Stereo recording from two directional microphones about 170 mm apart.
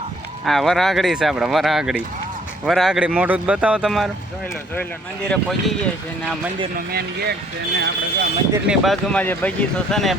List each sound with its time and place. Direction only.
0.4 s speech: centre (ahead or behind)
5.3 s speech: centre (ahead or behind)
6.7 s speech: 65° right (ahead or behind)
8.6 s speech: centre (ahead or behind)
9.2 s speech: 10° left (ahead or behind)